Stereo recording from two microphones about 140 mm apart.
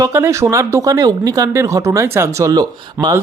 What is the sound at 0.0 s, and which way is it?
Speech, 20° right (ahead or behind).